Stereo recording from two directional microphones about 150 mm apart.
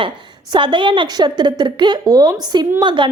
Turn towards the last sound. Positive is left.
turn(degrees=-30)  # may be behind; listen again after turning